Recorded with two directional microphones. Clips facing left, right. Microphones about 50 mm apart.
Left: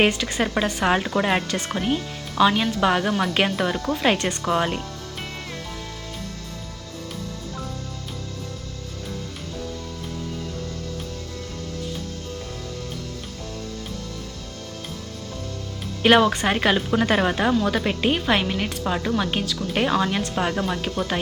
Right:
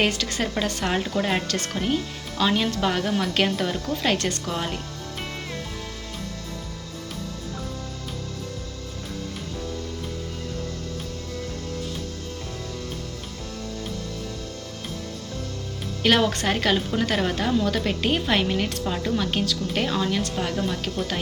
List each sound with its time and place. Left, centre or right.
0.0 s a woman's voice: left
2.9 s a woman's voice: left
16.2 s a woman's voice: centre
17.5 s speech: centre
19.8 s a woman's voice: left